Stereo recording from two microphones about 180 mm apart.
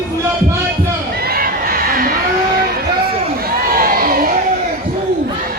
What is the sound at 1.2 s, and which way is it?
Crowd, 55° right (ahead or behind).